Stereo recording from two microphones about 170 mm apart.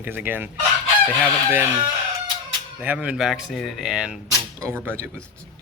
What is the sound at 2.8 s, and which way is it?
Speech, 10° right (ahead or behind).